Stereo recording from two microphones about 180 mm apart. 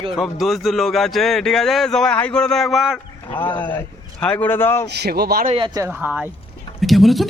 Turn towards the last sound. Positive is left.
turn(degrees=0)  # may be behind; listen again after turning